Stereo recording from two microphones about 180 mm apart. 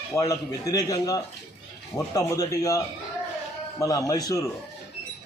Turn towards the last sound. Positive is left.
turn(degrees=20)  # may be behind; listen again after turning